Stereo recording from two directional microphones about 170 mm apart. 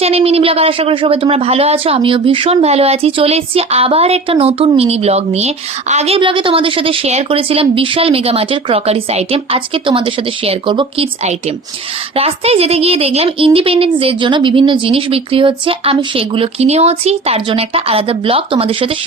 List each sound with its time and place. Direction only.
0.0 s a woman's voice: 40° right (ahead or behind)